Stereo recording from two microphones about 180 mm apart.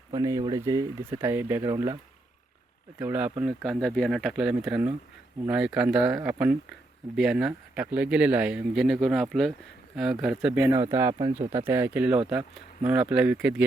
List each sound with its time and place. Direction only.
0.1 s speech: 20° right (ahead or behind)
3.0 s speech: 10° right (ahead or behind)